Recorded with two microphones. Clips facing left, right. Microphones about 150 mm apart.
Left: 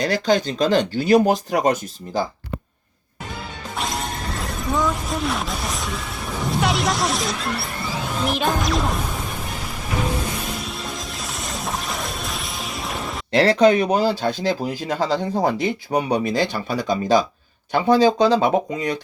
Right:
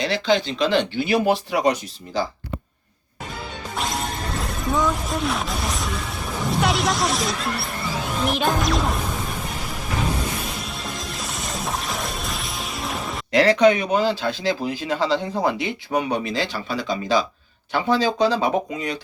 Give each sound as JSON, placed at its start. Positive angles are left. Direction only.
{"t": 0.0, "sound": "speech", "side_deg": 45}
{"t": 3.8, "sound": "speech", "side_deg": 0}
{"t": 8.3, "sound": "music", "side_deg": 0}
{"t": 10.6, "sound": "music", "side_deg": 0}
{"t": 13.3, "sound": "speech", "side_deg": 35}